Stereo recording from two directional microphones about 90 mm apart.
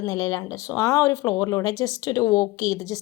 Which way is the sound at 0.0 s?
45° left (ahead or behind).